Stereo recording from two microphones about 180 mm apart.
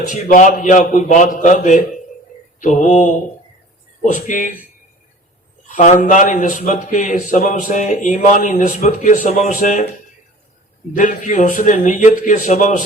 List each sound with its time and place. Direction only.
0.0 s a man's voice: 45° left (ahead or behind)
5.6 s a man's voice: 45° left (ahead or behind)
10.9 s a man's voice: 45° left (ahead or behind)